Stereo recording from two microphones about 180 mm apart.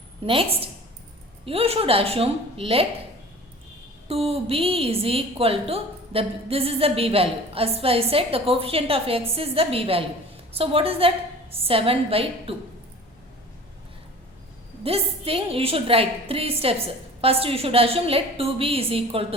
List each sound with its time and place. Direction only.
0.3 s a woman's voice: 30° right (ahead or behind)
4.1 s a woman's voice: 35° right (ahead or behind)
14.8 s a woman's voice: 30° right (ahead or behind)